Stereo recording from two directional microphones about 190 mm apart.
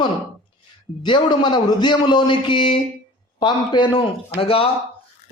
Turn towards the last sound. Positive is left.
turn(degrees=30)  # may be behind; listen again after turning